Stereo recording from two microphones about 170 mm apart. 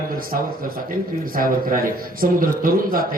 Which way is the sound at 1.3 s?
55° right (ahead or behind).